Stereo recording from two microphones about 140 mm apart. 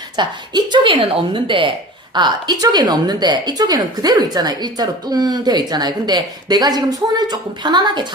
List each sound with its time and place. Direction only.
0.2 s a woman's voice: 30° right (ahead or behind)